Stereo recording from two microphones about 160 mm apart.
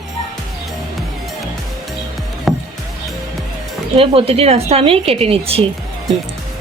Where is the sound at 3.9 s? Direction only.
35° right (ahead or behind).